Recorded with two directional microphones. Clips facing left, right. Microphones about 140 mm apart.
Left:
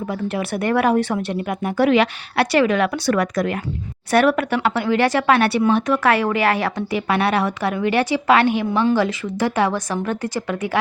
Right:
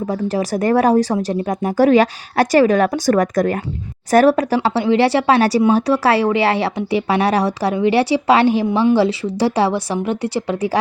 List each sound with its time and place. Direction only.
0.1 s speech: 40° right (ahead or behind)